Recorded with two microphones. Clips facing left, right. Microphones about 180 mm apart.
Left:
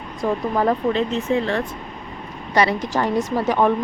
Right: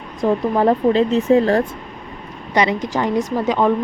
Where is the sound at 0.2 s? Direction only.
25° right (ahead or behind).